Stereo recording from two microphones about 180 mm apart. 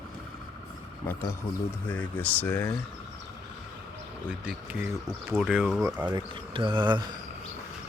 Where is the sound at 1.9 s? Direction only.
10° left (ahead or behind).